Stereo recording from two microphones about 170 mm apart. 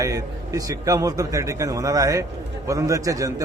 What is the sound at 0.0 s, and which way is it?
A man's voice, 20° right (ahead or behind).